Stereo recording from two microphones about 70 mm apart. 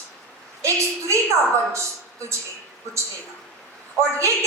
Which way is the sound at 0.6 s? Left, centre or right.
Right.